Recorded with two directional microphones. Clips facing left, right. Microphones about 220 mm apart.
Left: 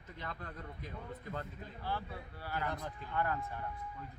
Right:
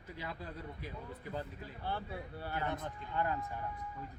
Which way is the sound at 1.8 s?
25° right (ahead or behind).